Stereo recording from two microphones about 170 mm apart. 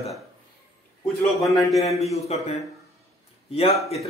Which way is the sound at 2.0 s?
40° left (ahead or behind).